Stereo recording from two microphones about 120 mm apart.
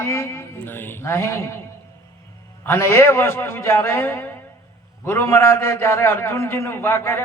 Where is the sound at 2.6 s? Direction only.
20° left (ahead or behind).